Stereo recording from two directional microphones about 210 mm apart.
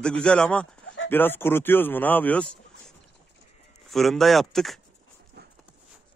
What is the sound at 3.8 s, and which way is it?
Speech, centre (ahead or behind).